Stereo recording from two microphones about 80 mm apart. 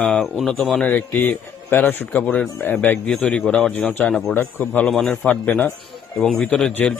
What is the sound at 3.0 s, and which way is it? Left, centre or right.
Speech, centre.